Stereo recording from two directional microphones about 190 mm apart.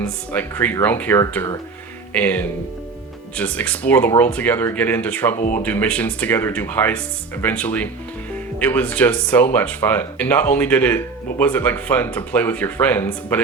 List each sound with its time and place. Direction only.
0.3 s speech: 10° left (ahead or behind)
5.4 s speech: 45° left (ahead or behind)
5.6 s speech: 10° left (ahead or behind)